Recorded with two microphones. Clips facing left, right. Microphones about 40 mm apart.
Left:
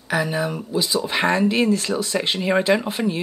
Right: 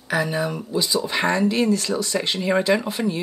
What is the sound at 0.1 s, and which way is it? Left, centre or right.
Speech, centre.